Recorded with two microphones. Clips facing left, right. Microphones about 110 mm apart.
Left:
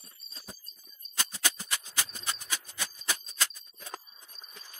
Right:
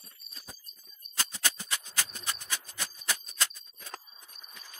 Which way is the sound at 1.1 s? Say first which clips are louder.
Even; 15° left (ahead or behind).